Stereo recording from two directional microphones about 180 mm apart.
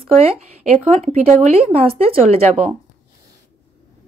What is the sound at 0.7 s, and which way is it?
Speech, 40° right (ahead or behind).